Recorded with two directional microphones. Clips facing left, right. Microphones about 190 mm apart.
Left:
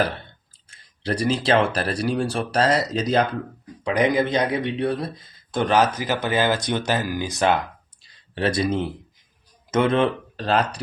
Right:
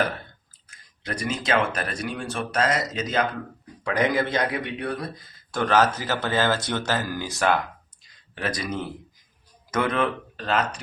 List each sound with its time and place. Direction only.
0.7 s speech: 35° left (ahead or behind)
3.8 s a man's voice: 15° left (ahead or behind); by 10.8 s 35° left (ahead or behind)